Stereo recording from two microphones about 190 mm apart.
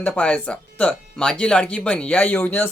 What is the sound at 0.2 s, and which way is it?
Speech, 5° left (ahead or behind).